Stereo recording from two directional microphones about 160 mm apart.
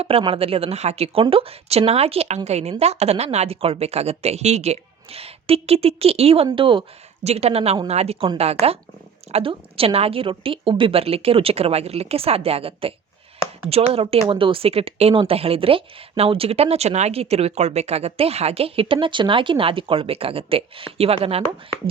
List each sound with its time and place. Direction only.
0.0 s speech: 35° right (ahead or behind)